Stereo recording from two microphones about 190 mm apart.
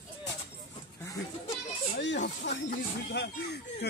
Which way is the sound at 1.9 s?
65° left (ahead or behind).